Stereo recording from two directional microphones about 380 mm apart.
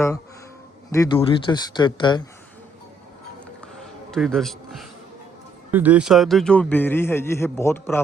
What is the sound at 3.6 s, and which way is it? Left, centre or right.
Music, centre.